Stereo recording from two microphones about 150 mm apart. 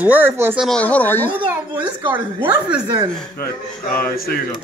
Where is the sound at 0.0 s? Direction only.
15° right (ahead or behind).